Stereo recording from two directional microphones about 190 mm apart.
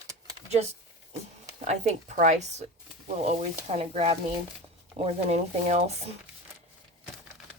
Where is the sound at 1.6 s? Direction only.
35° right (ahead or behind).